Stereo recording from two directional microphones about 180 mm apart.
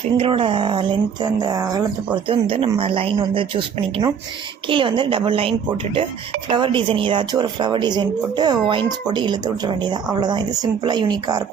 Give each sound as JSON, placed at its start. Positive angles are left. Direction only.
{"t": 0.2, "sound": "speech", "side_deg": -30}
{"t": 2.2, "sound": "speech", "side_deg": -30}